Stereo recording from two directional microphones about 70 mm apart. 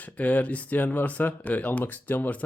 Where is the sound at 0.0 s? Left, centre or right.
Left.